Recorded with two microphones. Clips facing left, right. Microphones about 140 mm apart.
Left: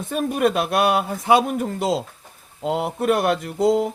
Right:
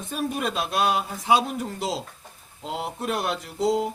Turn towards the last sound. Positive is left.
turn(degrees=55)  # may be behind; listen again after turning